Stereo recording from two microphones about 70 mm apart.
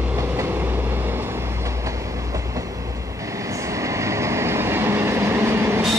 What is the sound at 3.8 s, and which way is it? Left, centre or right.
Train, right.